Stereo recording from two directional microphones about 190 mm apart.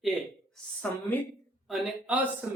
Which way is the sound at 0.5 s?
10° left (ahead or behind).